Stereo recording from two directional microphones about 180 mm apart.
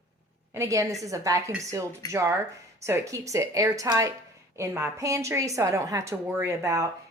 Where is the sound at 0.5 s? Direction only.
15° right (ahead or behind).